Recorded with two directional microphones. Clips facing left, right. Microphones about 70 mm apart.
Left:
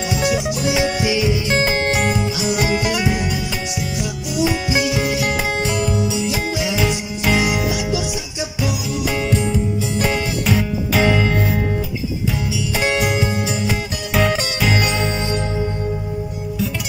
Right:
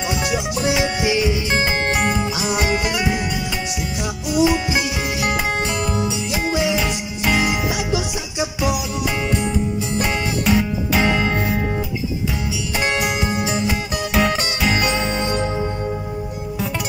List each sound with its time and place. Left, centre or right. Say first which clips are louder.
0.2 s music: left 3 dB; centre
1.5 s music: left 2 dB; centre
4.6 s music: left 2 dB; right
5.8 s music: left 2 dB; right
6.9 s music: left 2 dB; centre
7.6 s music: left 1 dB; right
10.0 s music: even; centre
12.7 s music: left 2 dB; centre
13.2 s music: left 1 dB; right
13.7 s music: right 1 dB; centre
15.1 s music: right 1 dB; right